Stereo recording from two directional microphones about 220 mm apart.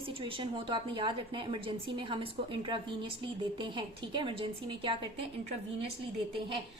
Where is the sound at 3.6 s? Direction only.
20° right (ahead or behind).